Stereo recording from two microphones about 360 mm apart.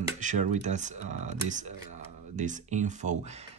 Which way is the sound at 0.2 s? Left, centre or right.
Centre.